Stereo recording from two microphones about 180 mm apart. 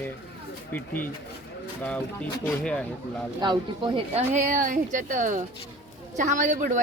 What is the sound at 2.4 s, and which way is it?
Speech, 5° left (ahead or behind).